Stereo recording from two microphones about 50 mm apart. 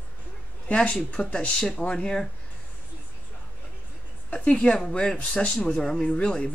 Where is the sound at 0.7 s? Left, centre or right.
Left.